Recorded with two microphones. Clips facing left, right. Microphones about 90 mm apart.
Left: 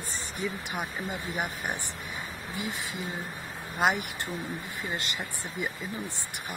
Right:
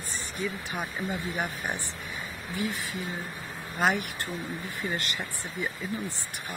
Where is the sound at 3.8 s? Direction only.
15° left (ahead or behind).